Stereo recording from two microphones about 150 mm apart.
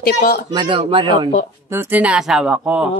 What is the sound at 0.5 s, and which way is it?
Speech, 30° right (ahead or behind).